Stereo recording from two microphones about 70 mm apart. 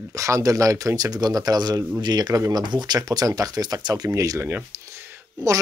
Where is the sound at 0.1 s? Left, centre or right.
Right.